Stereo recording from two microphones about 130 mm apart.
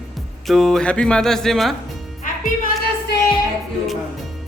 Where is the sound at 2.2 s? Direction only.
90° left.